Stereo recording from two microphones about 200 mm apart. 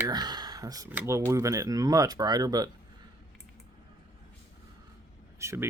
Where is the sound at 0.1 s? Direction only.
20° right (ahead or behind).